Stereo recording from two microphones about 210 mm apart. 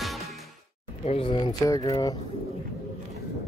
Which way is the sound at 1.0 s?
25° left (ahead or behind).